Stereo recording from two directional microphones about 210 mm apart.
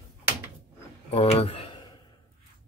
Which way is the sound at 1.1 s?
25° left (ahead or behind).